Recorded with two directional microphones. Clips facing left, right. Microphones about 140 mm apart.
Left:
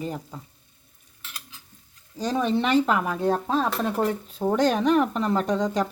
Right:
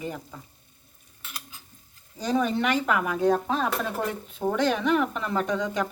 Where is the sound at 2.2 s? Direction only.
25° left (ahead or behind).